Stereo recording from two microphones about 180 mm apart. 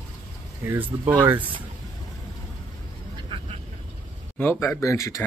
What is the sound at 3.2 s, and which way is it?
Vehicle, 30° right (ahead or behind).